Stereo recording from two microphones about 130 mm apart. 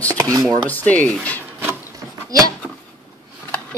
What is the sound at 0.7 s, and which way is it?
Speech, 10° left (ahead or behind).